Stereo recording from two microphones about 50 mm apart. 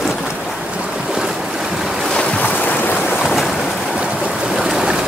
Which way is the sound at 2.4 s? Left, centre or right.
Left.